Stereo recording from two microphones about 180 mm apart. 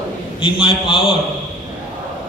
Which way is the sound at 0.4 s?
30° left (ahead or behind).